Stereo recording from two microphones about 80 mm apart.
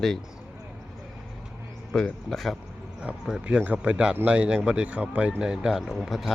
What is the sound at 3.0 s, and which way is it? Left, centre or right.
Speech, centre.